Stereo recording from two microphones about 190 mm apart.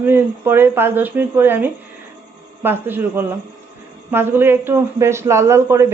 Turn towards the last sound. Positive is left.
turn(degrees=-15)  # may be behind; listen again after turning